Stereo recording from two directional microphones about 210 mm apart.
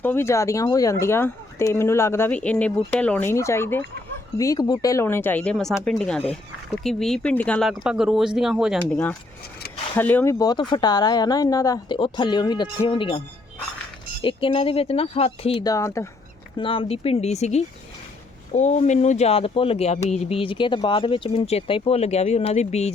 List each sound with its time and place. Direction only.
0.0 s speech: 10° left (ahead or behind)
9.9 s speech: 10° left (ahead or behind); by 15.7 s 25° left (ahead or behind)
15.7 s speech: 15° left (ahead or behind)
16.6 s speech: 25° left (ahead or behind)